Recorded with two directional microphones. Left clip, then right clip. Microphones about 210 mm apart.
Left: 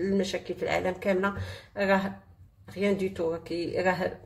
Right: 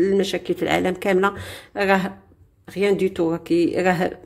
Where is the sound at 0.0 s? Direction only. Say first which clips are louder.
Right 9 dB; 40° right (ahead or behind).